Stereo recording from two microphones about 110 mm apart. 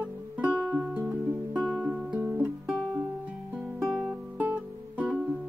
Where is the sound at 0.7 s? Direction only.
10° right (ahead or behind).